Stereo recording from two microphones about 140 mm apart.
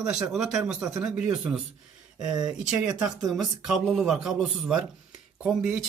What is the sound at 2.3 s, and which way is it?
Speech, 30° right (ahead or behind).